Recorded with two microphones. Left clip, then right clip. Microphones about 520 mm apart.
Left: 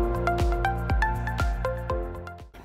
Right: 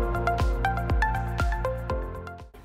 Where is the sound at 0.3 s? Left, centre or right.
Centre.